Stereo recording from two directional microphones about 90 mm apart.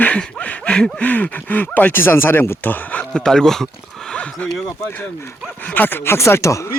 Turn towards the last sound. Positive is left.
turn(degrees=35)  # may be behind; listen again after turning